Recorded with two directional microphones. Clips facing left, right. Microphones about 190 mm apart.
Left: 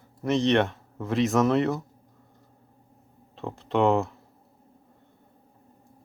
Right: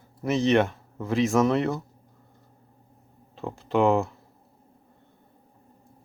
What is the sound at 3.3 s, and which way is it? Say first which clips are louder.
Speech: right 1 dB; centre (ahead or behind).